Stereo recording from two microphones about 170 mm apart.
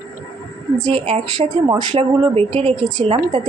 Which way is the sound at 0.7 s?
25° right (ahead or behind).